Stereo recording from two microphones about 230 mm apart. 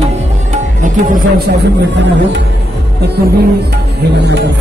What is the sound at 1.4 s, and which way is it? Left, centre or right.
Music, right.